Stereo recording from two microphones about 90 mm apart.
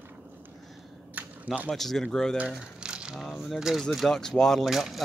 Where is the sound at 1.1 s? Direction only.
20° right (ahead or behind).